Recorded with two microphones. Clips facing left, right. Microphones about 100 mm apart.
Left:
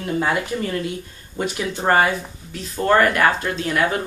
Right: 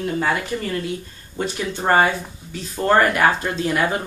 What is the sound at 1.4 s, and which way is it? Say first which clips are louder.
Speech: left 1 dB; 10° left (ahead or behind).